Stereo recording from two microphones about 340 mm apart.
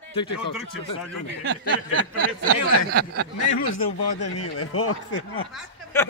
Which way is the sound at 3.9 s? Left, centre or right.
Left.